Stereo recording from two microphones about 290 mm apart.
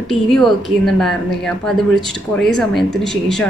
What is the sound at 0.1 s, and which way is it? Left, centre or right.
A woman's voice, centre.